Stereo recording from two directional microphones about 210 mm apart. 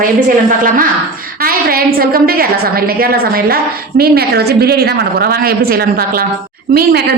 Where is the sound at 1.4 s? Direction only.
45° right (ahead or behind).